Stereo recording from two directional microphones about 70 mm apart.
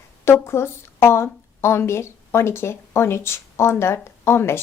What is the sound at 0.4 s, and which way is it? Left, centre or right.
A woman's voice, left.